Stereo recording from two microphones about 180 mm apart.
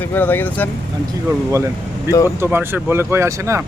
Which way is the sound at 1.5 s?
15° right (ahead or behind).